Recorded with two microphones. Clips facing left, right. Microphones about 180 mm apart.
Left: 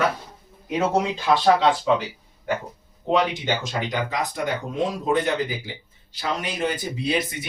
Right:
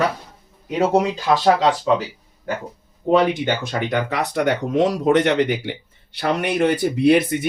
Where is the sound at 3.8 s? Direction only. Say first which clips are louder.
Right 4 dB; 65° right (ahead or behind).